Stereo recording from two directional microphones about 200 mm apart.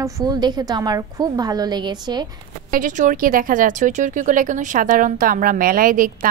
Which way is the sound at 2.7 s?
40° right (ahead or behind).